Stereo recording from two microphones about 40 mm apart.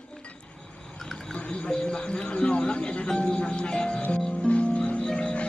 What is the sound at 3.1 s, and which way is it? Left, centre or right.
Music, left.